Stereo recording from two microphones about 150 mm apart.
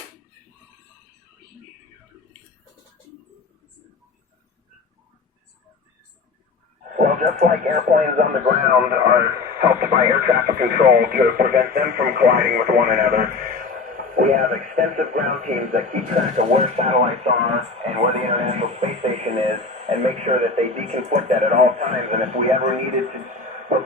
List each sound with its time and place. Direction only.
6.9 s speech: 55° right (ahead or behind); by 10.0 s 75° right (ahead or behind)
10.1 s speech: 90° right; by 22.6 s 50° right (ahead or behind)